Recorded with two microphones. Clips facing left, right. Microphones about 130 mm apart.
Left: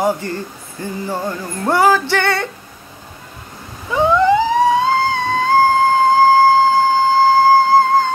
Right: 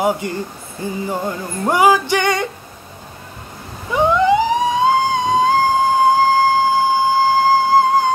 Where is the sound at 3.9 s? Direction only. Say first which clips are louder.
Left 1 dB; 15° right (ahead or behind).